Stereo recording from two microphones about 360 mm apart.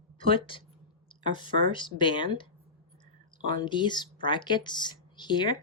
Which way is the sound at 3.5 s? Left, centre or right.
Centre.